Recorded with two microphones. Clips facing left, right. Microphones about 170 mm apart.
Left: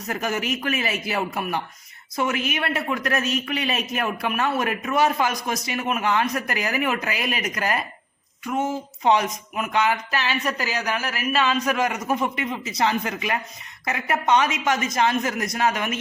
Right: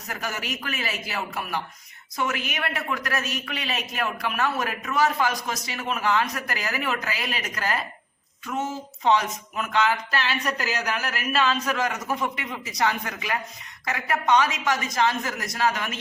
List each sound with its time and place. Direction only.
0.1 s speech: 20° left (ahead or behind)